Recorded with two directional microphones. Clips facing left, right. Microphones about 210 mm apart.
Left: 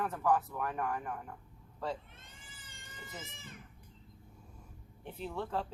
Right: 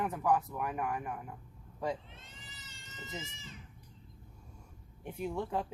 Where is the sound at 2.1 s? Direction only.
50° left (ahead or behind).